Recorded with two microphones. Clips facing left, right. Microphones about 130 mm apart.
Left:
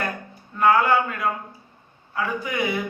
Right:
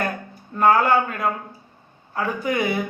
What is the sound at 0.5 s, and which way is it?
A man's voice, 40° right (ahead or behind).